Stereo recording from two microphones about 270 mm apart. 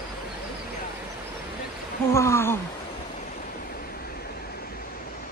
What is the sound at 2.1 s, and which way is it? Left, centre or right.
Speech, centre.